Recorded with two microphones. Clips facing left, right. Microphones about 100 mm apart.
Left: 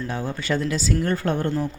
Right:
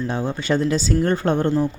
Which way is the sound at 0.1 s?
20° right (ahead or behind).